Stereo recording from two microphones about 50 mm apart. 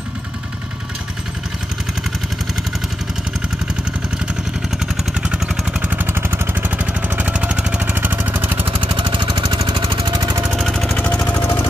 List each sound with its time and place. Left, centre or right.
4.9 s vehicle: centre
5.8 s vehicle: right
7.9 s vehicle: right
11.0 s jackhammer: left